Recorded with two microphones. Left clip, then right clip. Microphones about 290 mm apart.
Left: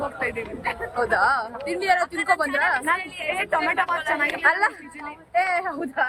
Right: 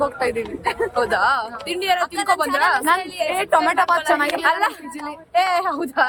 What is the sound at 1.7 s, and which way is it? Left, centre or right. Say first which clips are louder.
A woman's voice: right 1 dB; centre.